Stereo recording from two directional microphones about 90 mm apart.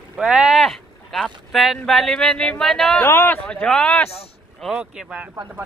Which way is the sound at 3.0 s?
25° left (ahead or behind).